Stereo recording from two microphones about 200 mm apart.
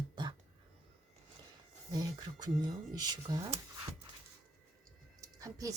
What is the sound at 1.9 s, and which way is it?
Speech, 20° right (ahead or behind).